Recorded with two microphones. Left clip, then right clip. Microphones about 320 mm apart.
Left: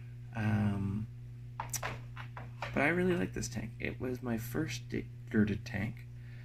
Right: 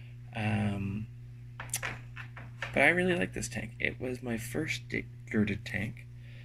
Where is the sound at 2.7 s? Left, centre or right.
Centre.